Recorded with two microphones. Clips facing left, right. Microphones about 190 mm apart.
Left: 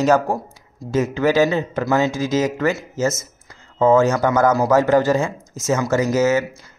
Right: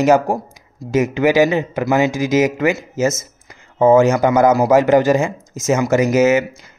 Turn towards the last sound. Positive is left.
turn(degrees=-20)  # may be behind; listen again after turning